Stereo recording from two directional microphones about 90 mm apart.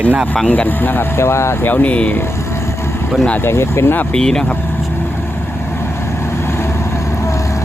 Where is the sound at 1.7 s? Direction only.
15° left (ahead or behind).